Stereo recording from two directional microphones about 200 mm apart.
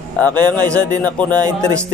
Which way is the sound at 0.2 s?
5° left (ahead or behind).